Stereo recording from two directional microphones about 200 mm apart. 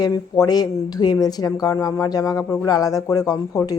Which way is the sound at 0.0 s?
20° left (ahead or behind).